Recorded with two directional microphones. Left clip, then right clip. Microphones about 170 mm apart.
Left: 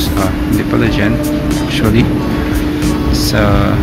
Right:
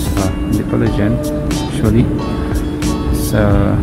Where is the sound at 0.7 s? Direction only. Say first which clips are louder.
Left 3 dB; 15° right (ahead or behind).